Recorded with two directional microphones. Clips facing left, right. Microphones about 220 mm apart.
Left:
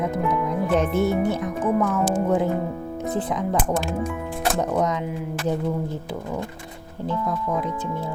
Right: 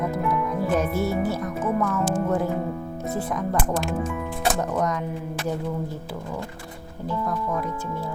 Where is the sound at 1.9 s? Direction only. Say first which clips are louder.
Left 2 dB; 20° left (ahead or behind).